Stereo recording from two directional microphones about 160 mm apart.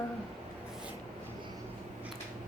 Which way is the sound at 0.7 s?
5° right (ahead or behind).